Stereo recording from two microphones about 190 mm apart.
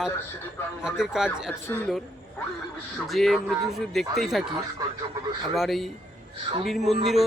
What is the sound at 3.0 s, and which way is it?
Speech, centre (ahead or behind).